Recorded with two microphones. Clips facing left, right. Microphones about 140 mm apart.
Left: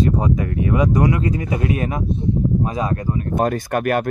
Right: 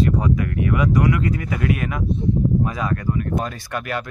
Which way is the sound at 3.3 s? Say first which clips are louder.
Left 7 dB; 50° left (ahead or behind).